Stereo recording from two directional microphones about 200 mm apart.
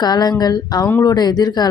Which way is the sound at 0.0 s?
20° left (ahead or behind).